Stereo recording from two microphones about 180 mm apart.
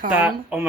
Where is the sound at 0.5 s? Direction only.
5° right (ahead or behind).